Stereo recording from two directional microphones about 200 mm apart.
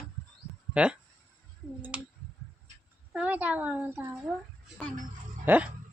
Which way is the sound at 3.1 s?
5° right (ahead or behind).